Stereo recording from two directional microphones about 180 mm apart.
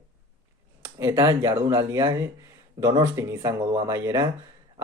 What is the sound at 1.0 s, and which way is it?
Speech, 20° right (ahead or behind).